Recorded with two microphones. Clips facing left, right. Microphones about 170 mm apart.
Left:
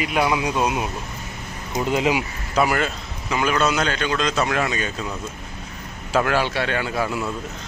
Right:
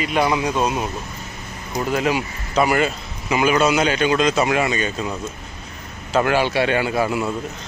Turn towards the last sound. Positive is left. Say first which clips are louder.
# right 4 dB
turn(degrees=-5)  # may be behind; listen again after turning